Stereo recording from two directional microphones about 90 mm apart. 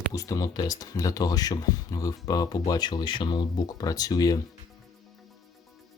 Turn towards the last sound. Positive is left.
turn(degrees=45)  # may be behind; listen again after turning